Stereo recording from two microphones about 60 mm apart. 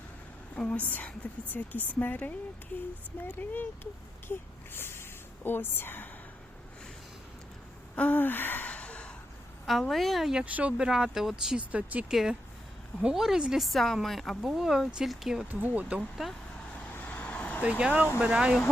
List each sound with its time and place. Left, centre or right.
0.5 s a woman's voice: left
7.9 s gasp: left
8.7 s a sound: centre
9.9 s speech: centre
10.4 s speech: right; by 11.5 s centre
11.5 s speech: right
12.0 s speech: centre
15.4 s speech: right
16.0 s speech: centre
16.9 s vehicle: left
17.6 s speech: centre